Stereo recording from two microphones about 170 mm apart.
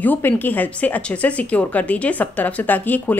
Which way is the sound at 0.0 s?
10° left (ahead or behind).